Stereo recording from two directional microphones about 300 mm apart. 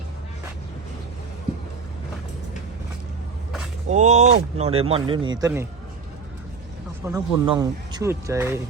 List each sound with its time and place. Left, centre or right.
3.8 s speech: right
7.0 s speech: centre